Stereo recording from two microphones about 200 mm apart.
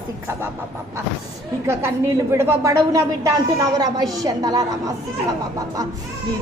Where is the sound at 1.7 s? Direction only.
15° right (ahead or behind).